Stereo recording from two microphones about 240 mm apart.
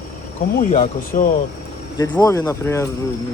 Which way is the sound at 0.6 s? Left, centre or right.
Left.